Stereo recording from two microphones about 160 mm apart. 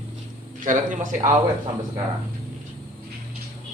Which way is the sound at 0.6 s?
55° right (ahead or behind).